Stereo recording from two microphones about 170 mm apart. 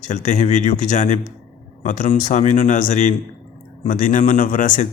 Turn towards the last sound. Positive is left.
turn(degrees=50)  # may be behind; listen again after turning